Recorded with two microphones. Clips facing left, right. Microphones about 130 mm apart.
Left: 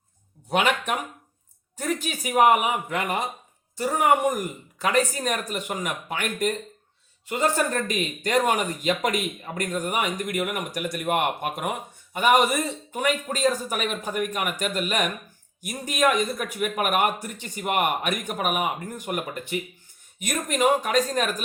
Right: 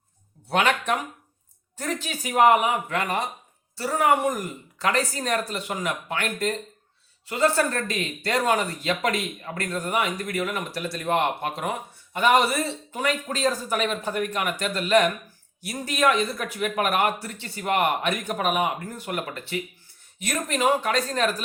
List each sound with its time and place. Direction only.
0.5 s speech: 10° left (ahead or behind)
10.7 s speech: 50° left (ahead or behind)
10.9 s speech: 15° left (ahead or behind)